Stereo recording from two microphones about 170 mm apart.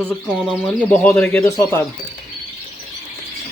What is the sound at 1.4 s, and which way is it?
Speech, 20° left (ahead or behind).